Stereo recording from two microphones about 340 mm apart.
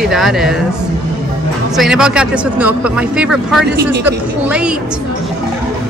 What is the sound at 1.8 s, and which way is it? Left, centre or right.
Speech, centre.